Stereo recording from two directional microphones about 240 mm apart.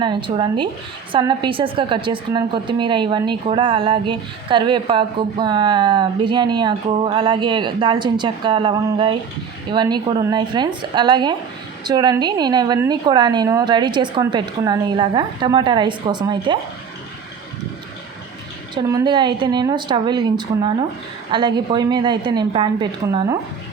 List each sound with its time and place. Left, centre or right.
0.0 s a woman's voice: centre
18.7 s a woman's voice: centre